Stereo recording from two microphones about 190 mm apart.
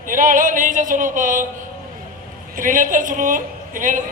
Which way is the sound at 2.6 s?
45° right (ahead or behind).